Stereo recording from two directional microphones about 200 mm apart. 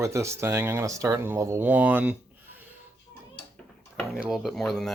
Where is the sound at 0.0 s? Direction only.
15° right (ahead or behind).